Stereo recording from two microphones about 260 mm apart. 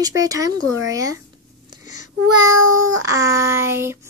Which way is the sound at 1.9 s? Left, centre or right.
Right.